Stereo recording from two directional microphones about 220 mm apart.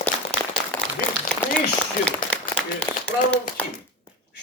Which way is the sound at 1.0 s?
40° left (ahead or behind).